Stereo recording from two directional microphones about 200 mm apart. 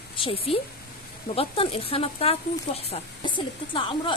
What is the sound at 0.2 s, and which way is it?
Speech, 25° left (ahead or behind).